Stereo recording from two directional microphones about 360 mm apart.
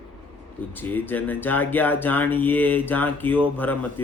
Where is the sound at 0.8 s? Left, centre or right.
Centre.